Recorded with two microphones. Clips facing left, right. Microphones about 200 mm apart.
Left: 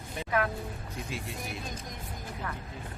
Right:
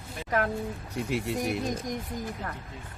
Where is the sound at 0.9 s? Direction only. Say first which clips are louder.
Right 11 dB; 70° right (ahead or behind).